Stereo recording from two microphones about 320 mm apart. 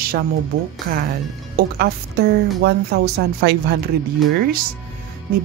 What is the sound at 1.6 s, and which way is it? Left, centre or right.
A woman's voice, right.